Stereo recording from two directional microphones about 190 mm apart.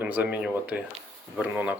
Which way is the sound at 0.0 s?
10° right (ahead or behind).